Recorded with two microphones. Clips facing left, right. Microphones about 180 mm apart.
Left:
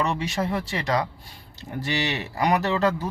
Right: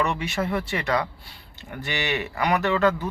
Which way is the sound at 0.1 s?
35° left (ahead or behind).